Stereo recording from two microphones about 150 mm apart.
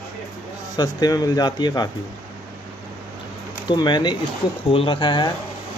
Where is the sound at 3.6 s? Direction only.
30° left (ahead or behind).